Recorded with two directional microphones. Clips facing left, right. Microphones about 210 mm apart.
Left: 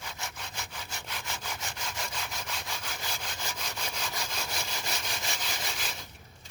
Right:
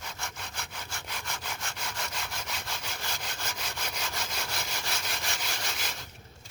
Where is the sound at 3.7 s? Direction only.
10° left (ahead or behind).